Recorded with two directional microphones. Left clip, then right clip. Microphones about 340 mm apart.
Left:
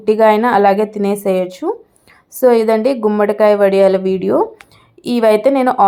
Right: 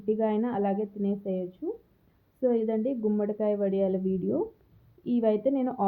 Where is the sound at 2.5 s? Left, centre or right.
Centre.